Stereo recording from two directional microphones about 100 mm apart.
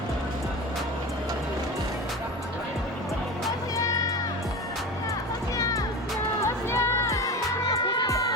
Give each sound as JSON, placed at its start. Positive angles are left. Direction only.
{"t": 3.8, "sound": "music", "side_deg": 35}
{"t": 5.5, "sound": "music", "side_deg": 35}